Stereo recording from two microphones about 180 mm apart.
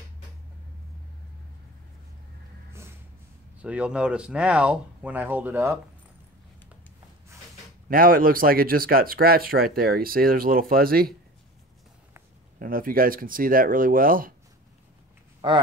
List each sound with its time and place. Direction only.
3.5 s speech: 5° right (ahead or behind)
7.9 s speech: 50° right (ahead or behind)
12.5 s speech: 50° right (ahead or behind)
15.4 s speech: 25° right (ahead or behind)